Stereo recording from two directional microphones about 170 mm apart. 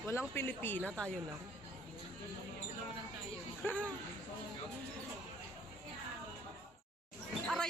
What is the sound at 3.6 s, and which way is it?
Speech, 10° left (ahead or behind).